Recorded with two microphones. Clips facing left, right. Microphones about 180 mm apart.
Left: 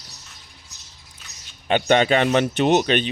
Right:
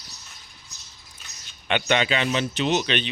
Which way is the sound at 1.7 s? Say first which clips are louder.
Left 6 dB; 50° left (ahead or behind).